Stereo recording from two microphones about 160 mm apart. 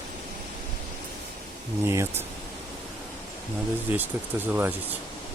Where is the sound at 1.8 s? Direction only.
15° right (ahead or behind).